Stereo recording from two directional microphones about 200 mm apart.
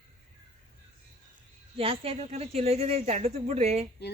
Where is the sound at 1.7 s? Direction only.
30° right (ahead or behind).